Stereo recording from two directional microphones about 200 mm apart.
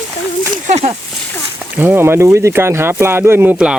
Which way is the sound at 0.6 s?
35° right (ahead or behind).